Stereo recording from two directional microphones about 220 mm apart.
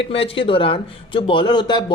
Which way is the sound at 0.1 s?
25° left (ahead or behind).